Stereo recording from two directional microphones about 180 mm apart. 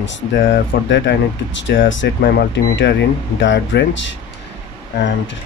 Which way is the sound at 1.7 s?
90° left.